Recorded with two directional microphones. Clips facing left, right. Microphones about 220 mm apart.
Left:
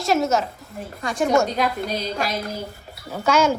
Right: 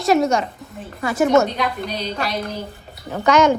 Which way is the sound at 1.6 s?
45° left (ahead or behind).